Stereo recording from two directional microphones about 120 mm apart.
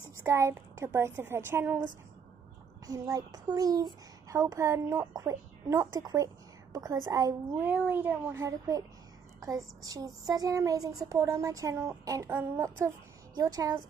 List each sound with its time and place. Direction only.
0.2 s a child's voice: 20° right (ahead or behind)
2.9 s a child's voice: 30° right (ahead or behind)
7.5 s a child's voice: 15° right (ahead or behind); by 13.7 s 30° right (ahead or behind)